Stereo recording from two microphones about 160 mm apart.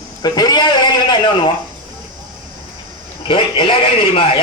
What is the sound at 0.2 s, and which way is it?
A man's voice, 25° left (ahead or behind).